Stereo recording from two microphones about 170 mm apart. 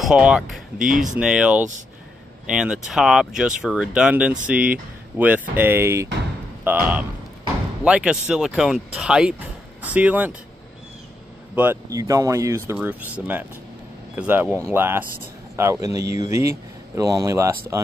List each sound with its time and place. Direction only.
0.0 s speech: 5° right (ahead or behind)
0.7 s speech: 50° right (ahead or behind)
1.2 s speech: 5° right (ahead or behind)
11.5 s speech: 10° right (ahead or behind)